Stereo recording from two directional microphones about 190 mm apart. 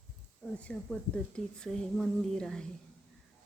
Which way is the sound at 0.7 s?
5° left (ahead or behind).